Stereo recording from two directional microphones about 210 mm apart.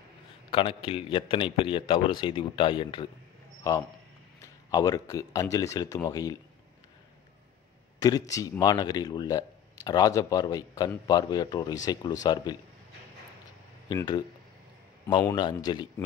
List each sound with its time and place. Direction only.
0.5 s speech: 25° left (ahead or behind)
4.6 s speech: 20° left (ahead or behind)
8.0 s speech: 15° left (ahead or behind)
13.8 s speech: 20° left (ahead or behind)